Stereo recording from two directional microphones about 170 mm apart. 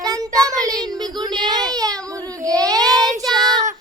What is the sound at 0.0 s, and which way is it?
Child singing, 20° right (ahead or behind).